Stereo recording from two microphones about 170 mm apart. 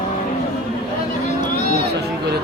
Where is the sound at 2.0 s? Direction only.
75° right (ahead or behind).